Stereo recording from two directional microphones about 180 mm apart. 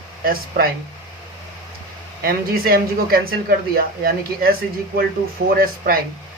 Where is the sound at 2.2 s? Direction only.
55° right (ahead or behind).